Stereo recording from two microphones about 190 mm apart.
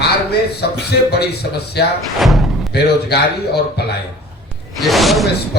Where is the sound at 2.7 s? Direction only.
60° left (ahead or behind).